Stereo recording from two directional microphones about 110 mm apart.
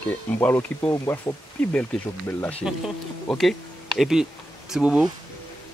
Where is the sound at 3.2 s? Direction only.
Centre (ahead or behind).